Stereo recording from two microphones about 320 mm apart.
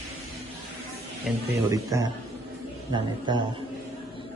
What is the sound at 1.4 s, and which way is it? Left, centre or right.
Speech, centre.